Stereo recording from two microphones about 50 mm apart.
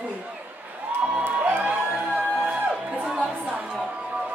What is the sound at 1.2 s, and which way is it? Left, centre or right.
Music, right.